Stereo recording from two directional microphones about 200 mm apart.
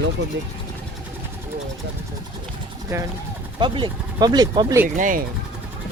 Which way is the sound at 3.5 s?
25° right (ahead or behind).